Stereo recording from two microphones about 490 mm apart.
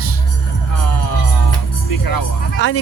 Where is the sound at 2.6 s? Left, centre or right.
Left.